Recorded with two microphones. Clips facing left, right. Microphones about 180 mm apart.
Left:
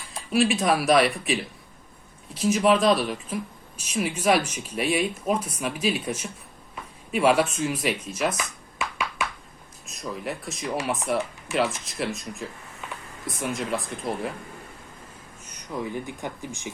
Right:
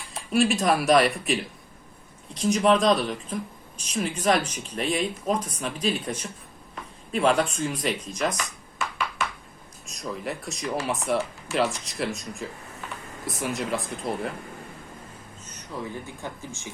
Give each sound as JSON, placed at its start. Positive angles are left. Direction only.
{"t": 0.1, "sound": "speech", "side_deg": 0}
{"t": 8.8, "sound": "a sound", "side_deg": 10}
{"t": 9.8, "sound": "speech", "side_deg": 0}
{"t": 15.4, "sound": "speech", "side_deg": 15}